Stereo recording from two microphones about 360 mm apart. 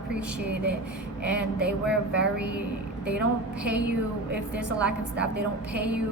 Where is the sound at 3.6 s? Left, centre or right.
Centre.